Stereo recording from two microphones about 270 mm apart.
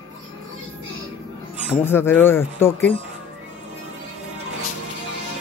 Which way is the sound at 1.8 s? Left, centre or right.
Centre.